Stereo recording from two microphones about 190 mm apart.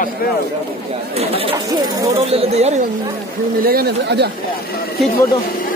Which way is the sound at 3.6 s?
50° right (ahead or behind).